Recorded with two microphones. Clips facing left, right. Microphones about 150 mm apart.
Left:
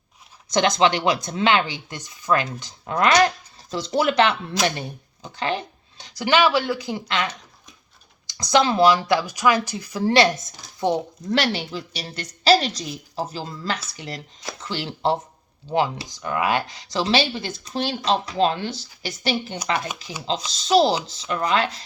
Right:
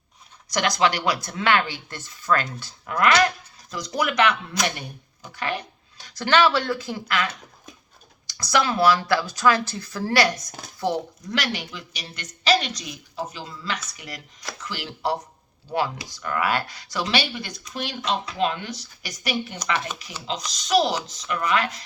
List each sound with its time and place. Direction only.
0.4 s speech: 25° left (ahead or behind)
8.4 s speech: 20° left (ahead or behind)
11.3 s speech: 30° left (ahead or behind)